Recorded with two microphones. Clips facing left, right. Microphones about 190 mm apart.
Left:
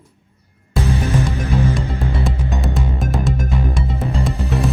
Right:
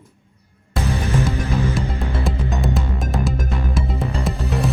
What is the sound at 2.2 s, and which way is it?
Music, centre (ahead or behind).